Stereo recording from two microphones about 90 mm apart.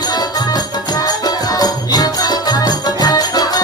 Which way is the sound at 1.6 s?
45° left (ahead or behind).